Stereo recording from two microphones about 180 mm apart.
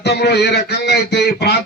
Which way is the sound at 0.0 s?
65° left (ahead or behind).